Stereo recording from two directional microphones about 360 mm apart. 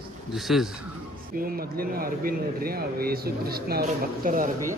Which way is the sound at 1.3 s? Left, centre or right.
Right.